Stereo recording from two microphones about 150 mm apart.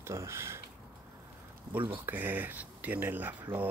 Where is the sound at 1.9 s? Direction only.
15° right (ahead or behind).